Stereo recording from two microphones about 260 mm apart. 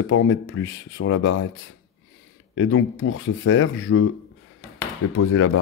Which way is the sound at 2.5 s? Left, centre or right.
Left.